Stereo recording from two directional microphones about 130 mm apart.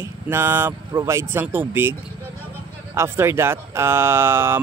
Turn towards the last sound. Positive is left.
turn(degrees=-20)  # may be behind; listen again after turning